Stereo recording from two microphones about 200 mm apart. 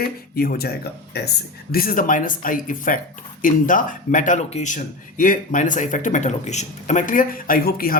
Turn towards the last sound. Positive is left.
turn(degrees=45)  # may be behind; listen again after turning